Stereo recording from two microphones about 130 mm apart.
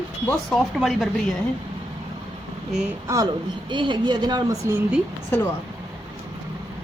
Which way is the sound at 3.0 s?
30° right (ahead or behind).